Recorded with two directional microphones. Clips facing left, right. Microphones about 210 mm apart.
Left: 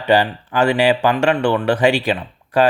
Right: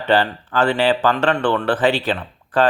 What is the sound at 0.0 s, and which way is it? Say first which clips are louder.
Speech: left 2 dB; 10° left (ahead or behind).